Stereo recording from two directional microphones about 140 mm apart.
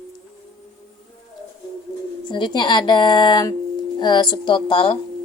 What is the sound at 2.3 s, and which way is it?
A woman's voice, 30° left (ahead or behind).